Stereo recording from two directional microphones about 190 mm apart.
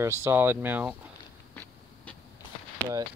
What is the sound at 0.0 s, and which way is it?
Speech, 15° right (ahead or behind).